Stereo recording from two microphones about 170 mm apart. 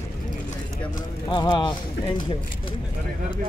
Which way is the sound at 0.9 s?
25° left (ahead or behind).